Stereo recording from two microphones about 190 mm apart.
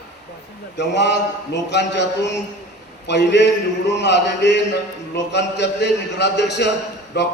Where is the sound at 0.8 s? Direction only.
65° left (ahead or behind).